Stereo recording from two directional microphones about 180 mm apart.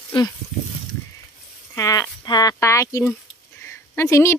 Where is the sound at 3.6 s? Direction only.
15° left (ahead or behind).